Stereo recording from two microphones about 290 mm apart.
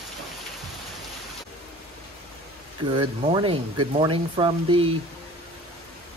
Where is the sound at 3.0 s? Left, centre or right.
Centre.